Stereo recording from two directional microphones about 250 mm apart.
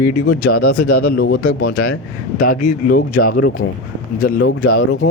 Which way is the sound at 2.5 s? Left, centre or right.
Left.